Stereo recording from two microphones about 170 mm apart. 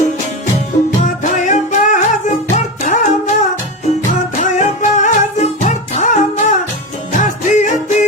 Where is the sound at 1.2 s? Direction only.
45° left (ahead or behind).